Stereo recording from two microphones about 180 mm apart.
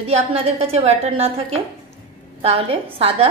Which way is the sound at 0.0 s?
35° right (ahead or behind).